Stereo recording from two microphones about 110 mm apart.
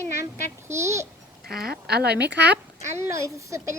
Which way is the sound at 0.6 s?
25° right (ahead or behind).